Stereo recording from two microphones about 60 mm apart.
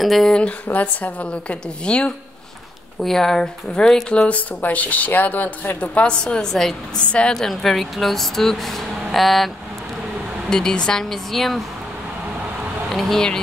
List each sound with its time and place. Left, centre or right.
0.0 s speech: centre
0.3 s speech: centre
3.0 s speech: centre
4.3 s speech: left
6.2 s speech: centre
7.0 s speech: centre
7.4 s speech: centre
10.5 s speech: centre
12.9 s speech: centre